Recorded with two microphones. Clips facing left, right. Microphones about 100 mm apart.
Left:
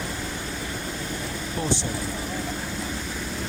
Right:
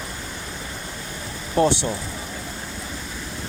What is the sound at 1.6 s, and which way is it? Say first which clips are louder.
Speech: right 11 dB; 70° right (ahead or behind).